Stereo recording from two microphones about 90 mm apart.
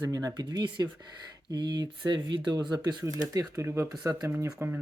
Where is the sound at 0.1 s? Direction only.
45° right (ahead or behind).